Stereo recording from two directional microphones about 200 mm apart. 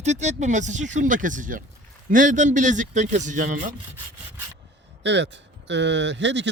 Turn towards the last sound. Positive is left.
turn(degrees=-60)  # may be behind; listen again after turning